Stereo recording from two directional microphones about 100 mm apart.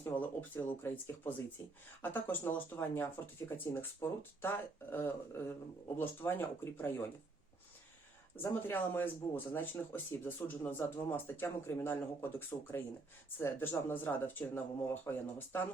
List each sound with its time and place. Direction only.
0.0 s speech: 20° left (ahead or behind)
8.4 s speech: 25° left (ahead or behind)